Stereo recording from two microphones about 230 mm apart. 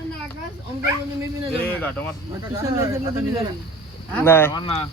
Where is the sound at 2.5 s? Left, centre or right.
Centre.